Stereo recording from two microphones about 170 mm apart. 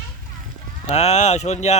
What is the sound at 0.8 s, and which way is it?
Speech, 40° left (ahead or behind).